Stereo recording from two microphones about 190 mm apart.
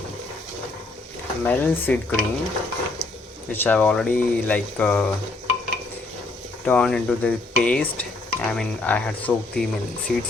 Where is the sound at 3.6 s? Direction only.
10° left (ahead or behind).